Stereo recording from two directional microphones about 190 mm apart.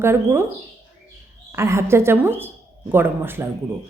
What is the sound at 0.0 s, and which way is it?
Speech, 15° right (ahead or behind).